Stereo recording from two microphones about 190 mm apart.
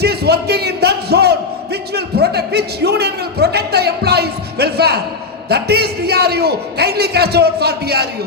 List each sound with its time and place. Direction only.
0.0 s speech: 55° right (ahead or behind)